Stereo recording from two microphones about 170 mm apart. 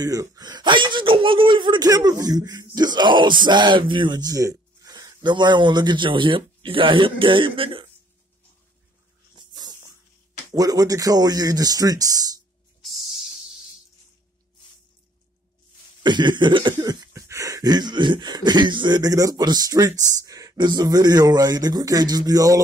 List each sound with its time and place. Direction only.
0.0 s speech: 20° right (ahead or behind)
10.5 s speech: 20° right (ahead or behind)
16.0 s a sound: 25° right (ahead or behind)
20.2 s speech: 20° right (ahead or behind)